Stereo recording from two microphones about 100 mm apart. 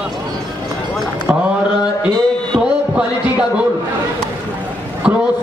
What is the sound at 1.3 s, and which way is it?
Mantra, 10° right (ahead or behind).